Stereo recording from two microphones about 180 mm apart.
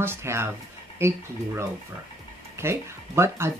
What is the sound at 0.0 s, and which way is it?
Speech, 15° right (ahead or behind).